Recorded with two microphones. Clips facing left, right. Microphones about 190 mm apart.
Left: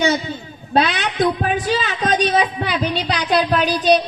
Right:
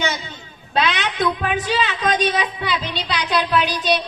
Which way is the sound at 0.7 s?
40° left (ahead or behind).